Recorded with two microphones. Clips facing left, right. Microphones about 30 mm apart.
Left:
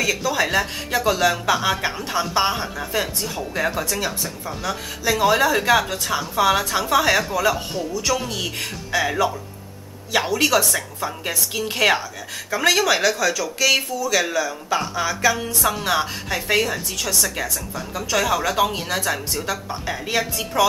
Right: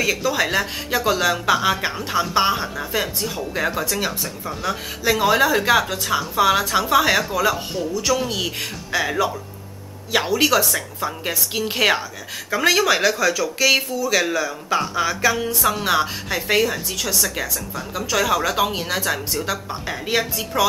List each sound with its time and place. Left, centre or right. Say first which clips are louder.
0.0 s speech: right 1 dB; centre
1.9 s speech: right 1 dB; centre